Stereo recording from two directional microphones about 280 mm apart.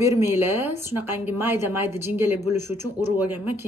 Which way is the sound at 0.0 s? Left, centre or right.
Centre.